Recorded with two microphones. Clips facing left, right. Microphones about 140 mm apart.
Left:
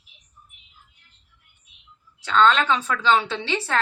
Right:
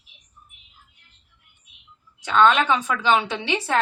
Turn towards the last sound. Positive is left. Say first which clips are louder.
# right 2 dB
turn(degrees=-15)  # may be behind; listen again after turning